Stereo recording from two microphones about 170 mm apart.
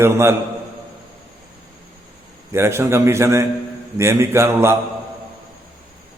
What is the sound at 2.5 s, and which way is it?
A man's voice, 15° right (ahead or behind).